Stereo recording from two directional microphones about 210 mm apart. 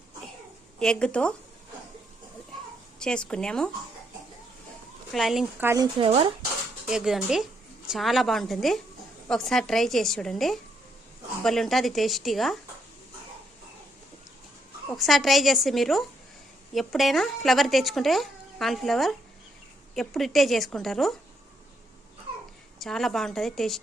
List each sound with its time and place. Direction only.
0.8 s speech: 5° left (ahead or behind)
3.0 s speech: 5° left (ahead or behind)
5.1 s speech: centre (ahead or behind); by 6.3 s 25° right (ahead or behind)
6.8 s speech: centre (ahead or behind)
14.8 s speech: centre (ahead or behind)
22.8 s speech: centre (ahead or behind)